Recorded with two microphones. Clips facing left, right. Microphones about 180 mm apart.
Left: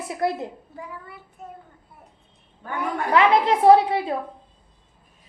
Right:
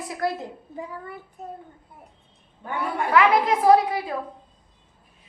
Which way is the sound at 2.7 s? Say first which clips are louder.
Even; 20° left (ahead or behind).